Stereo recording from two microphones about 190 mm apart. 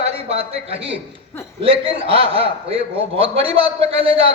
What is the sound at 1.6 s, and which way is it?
A man's voice, 30° right (ahead or behind).